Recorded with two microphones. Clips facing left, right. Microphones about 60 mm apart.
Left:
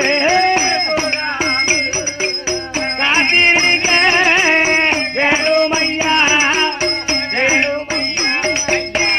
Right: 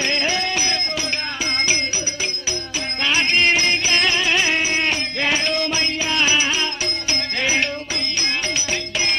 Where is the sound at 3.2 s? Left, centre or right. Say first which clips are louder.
Left 5 dB; left.